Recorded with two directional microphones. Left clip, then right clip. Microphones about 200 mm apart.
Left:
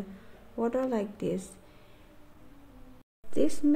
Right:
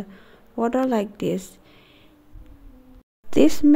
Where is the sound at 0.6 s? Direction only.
35° right (ahead or behind).